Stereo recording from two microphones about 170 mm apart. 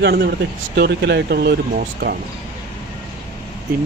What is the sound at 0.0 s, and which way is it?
Speech, 70° right (ahead or behind).